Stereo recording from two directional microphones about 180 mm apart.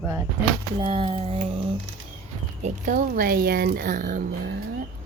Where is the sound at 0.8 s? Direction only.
30° right (ahead or behind).